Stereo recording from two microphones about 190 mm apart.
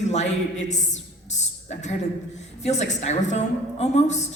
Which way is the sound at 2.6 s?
35° left (ahead or behind).